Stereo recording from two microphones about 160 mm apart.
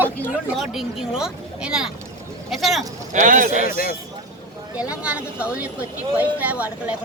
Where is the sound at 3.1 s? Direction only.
55° right (ahead or behind).